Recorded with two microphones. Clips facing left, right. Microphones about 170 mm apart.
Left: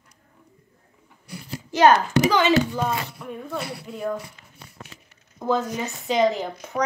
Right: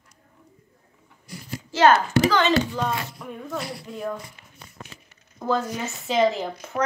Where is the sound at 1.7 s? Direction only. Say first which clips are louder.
Left 1 dB; 15° left (ahead or behind).